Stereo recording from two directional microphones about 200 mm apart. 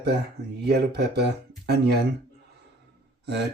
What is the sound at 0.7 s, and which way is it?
Speech, 55° right (ahead or behind).